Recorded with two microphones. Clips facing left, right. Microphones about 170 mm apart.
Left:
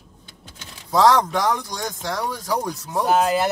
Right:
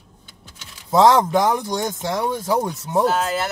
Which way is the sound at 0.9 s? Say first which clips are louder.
Right 2 dB; 25° right (ahead or behind).